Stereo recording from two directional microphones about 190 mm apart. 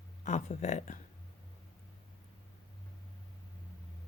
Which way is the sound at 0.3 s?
35° left (ahead or behind).